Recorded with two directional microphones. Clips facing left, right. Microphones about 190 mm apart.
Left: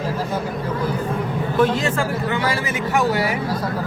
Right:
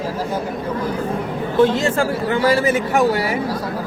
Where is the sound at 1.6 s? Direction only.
30° right (ahead or behind).